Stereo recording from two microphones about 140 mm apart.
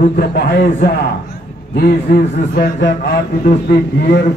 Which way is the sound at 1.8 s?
90° left.